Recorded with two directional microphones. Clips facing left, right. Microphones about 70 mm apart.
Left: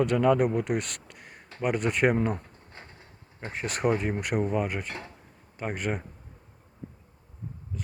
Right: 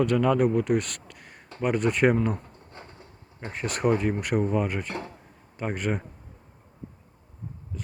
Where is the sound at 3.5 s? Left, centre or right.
Centre.